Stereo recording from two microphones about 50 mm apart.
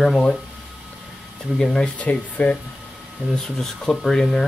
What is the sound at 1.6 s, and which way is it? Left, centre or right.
Speech, centre.